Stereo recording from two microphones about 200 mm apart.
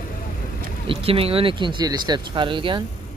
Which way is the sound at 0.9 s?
30° right (ahead or behind).